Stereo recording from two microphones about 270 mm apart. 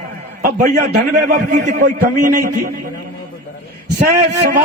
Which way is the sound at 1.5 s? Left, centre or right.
Right.